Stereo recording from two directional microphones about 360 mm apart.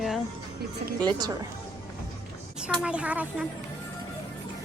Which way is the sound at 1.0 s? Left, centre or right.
Centre.